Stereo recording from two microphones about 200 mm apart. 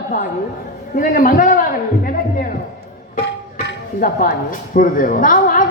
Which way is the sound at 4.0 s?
45° left (ahead or behind).